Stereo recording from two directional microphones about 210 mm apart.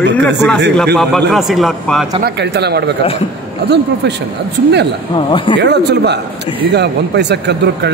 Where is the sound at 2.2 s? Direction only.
50° right (ahead or behind).